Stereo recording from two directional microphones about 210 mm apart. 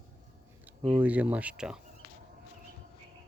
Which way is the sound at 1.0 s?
5° right (ahead or behind).